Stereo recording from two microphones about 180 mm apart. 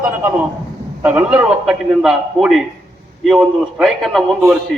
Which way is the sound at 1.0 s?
10° right (ahead or behind).